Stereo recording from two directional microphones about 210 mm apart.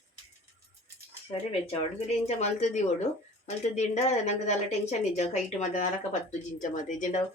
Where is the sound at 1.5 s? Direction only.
30° left (ahead or behind).